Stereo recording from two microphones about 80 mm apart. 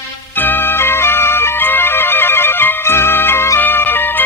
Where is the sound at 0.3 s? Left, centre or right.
Left.